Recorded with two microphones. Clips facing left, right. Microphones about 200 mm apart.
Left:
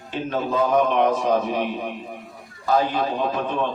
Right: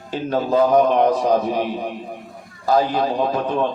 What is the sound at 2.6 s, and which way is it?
Speech, 40° right (ahead or behind).